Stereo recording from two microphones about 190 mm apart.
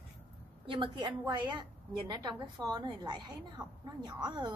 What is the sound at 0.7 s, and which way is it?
A woman's voice, 25° right (ahead or behind).